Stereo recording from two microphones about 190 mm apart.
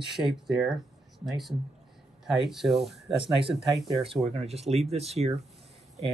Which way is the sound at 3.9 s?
30° right (ahead or behind).